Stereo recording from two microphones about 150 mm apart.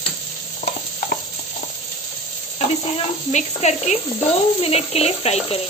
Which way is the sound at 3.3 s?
50° left (ahead or behind).